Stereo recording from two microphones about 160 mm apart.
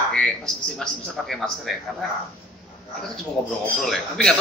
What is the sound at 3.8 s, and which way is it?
Speech, centre (ahead or behind).